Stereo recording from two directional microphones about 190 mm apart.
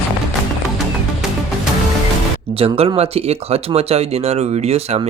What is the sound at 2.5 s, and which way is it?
Speech, 30° right (ahead or behind).